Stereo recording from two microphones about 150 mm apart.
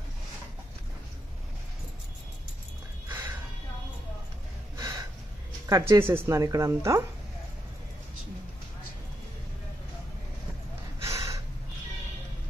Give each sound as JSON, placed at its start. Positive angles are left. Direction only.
{"t": 3.1, "sound": "a sound", "side_deg": -15}
{"t": 4.7, "sound": "gasp", "side_deg": -25}
{"t": 5.7, "sound": "speech", "side_deg": -20}
{"t": 11.0, "sound": "gasp", "side_deg": -20}